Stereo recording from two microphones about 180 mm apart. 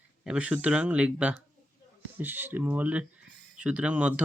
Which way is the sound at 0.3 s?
5° right (ahead or behind).